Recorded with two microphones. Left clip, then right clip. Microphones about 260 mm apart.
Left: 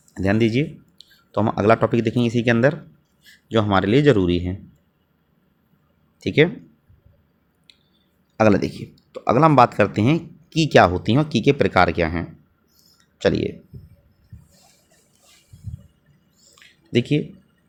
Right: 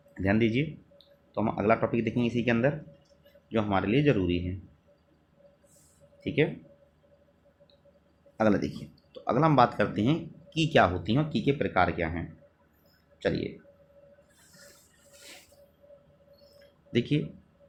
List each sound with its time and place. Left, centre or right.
0.1 s speech: left
6.2 s speech: left
8.4 s speech: left
16.9 s speech: left